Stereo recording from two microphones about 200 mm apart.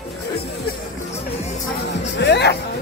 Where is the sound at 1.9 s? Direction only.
60° left (ahead or behind).